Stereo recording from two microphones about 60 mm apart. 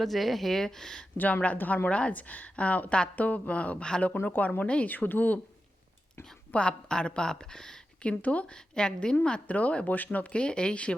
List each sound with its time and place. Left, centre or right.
0.0 s speech: centre
1.1 s a woman's voice: left
4.2 s a woman's voice: left
6.5 s speech: centre
8.0 s a woman's voice: left